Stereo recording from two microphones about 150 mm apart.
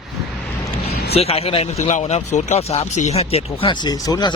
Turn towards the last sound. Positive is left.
turn(degrees=25)  # may be behind; listen again after turning